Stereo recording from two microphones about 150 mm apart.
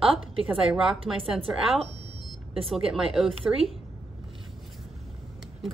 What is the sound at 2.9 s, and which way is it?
Speech, centre (ahead or behind).